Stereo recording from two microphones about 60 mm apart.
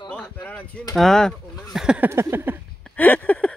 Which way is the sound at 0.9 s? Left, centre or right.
Centre.